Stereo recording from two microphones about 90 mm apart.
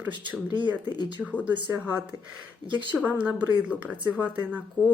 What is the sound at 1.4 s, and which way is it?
Speech, 20° right (ahead or behind).